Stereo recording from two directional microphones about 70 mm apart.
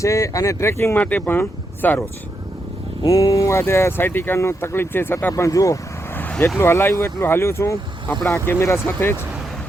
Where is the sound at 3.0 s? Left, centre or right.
Left.